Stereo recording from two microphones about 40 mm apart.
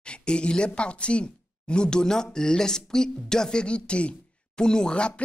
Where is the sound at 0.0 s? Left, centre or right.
Left.